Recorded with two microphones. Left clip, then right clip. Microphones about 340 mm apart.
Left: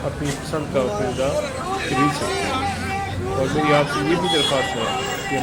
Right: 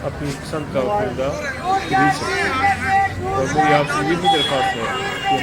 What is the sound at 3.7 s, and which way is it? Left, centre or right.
Speech, centre.